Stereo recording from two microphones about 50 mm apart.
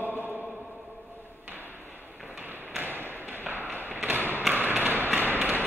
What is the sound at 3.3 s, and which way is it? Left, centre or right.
Tap, right.